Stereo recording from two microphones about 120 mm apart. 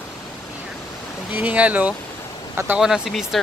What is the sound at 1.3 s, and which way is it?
Speech, 10° right (ahead or behind).